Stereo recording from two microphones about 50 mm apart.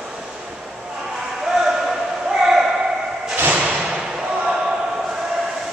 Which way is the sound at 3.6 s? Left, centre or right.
Right.